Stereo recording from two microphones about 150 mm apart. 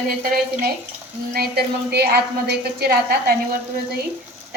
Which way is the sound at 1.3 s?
90° right.